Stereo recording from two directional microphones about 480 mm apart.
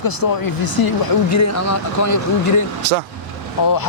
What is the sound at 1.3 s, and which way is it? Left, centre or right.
Speech, left.